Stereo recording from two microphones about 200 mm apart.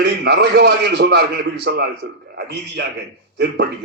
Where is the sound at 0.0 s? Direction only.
55° right (ahead or behind).